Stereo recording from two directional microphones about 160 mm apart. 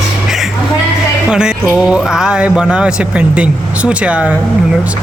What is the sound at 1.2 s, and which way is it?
A man's voice, 5° right (ahead or behind).